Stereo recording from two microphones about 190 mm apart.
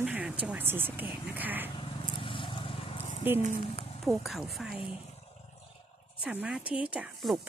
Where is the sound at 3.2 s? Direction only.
10° right (ahead or behind).